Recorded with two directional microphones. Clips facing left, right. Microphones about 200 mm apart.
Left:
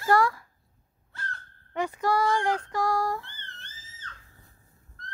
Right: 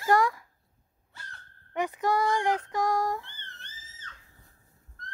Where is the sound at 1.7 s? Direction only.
15° right (ahead or behind).